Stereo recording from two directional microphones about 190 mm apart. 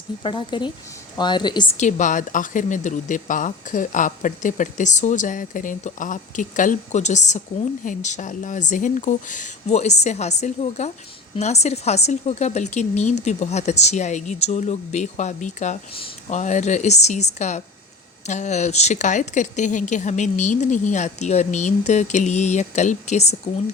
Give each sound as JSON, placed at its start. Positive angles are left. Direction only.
{"t": 0.2, "sound": "speech", "side_deg": 25}
{"t": 1.8, "sound": "speech", "side_deg": 40}